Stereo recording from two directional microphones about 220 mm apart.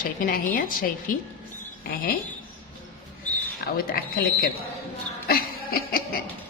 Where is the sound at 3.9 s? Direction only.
40° left (ahead or behind).